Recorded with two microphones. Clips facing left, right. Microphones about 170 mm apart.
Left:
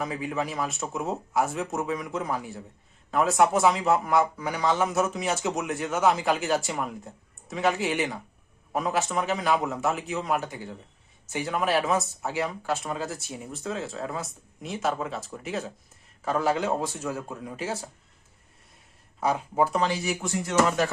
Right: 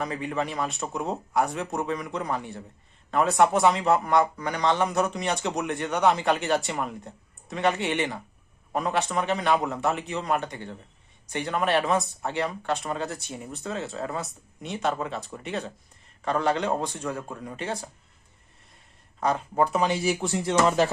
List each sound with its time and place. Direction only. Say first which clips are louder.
0.0 s a man's voice: right 1 dB; centre (ahead or behind)
19.2 s speech: even; 10° left (ahead or behind)
19.9 s speech: right 3 dB; 30° right (ahead or behind)